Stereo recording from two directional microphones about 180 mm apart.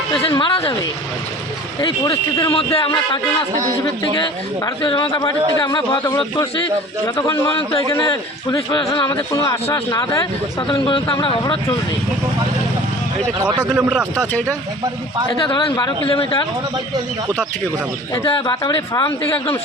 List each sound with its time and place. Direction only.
0.1 s a man's voice: 30° left (ahead or behind)
1.8 s a man's voice: 20° left (ahead or behind)
13.4 s a man's voice: 20° right (ahead or behind)
13.7 s speech: 5° right (ahead or behind)
15.4 s a man's voice: 25° left (ahead or behind)
18.1 s a man's voice: 25° left (ahead or behind)